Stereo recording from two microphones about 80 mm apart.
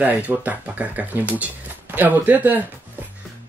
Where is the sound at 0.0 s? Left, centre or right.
Centre.